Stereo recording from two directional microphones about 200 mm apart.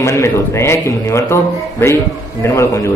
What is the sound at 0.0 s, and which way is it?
Speech, 15° left (ahead or behind).